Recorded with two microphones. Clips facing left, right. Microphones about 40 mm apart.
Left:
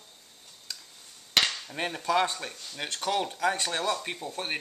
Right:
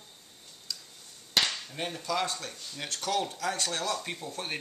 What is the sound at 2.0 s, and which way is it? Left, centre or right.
Speech, left.